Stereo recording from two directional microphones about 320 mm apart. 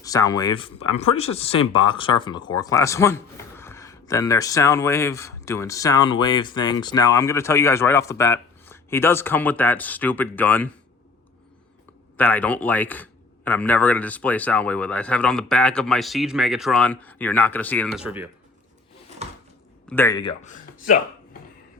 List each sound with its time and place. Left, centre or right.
0.0 s speech: centre
12.1 s speech: centre
19.9 s speech: centre; by 21.0 s left